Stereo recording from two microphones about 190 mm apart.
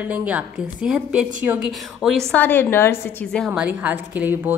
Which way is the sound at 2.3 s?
10° left (ahead or behind).